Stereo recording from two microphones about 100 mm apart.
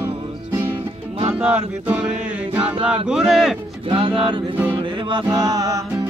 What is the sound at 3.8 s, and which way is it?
Music, 60° right (ahead or behind).